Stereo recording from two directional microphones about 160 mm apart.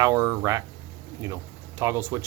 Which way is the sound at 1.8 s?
15° right (ahead or behind).